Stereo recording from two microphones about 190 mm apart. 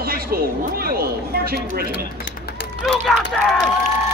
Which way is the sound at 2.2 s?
60° left (ahead or behind).